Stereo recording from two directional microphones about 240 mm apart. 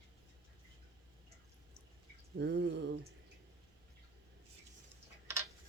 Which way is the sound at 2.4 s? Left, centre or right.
Right.